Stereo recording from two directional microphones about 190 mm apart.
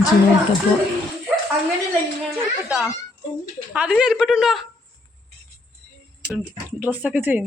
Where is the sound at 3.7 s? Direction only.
5° right (ahead or behind).